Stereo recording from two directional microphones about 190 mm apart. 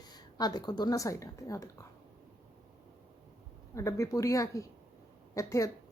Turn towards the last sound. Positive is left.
turn(degrees=15)  # may be behind; listen again after turning